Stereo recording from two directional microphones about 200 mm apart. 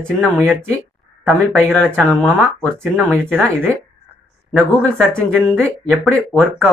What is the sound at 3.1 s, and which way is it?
Speech, 10° right (ahead or behind).